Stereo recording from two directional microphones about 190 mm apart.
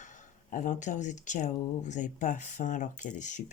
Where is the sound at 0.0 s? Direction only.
40° left (ahead or behind).